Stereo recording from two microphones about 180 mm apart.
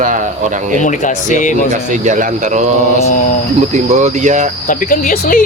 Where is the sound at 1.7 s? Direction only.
45° right (ahead or behind).